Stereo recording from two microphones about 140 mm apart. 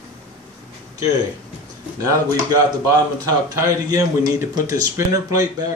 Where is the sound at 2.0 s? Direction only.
25° right (ahead or behind).